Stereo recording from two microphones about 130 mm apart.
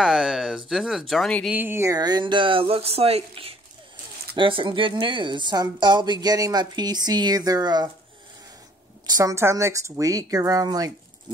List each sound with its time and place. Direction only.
0.0 s speech: 5° right (ahead or behind)
1.5 s speech: 15° right (ahead or behind)
9.0 s speech: 25° right (ahead or behind)